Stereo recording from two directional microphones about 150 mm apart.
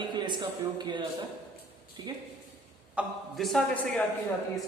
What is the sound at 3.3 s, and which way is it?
Speech, centre (ahead or behind).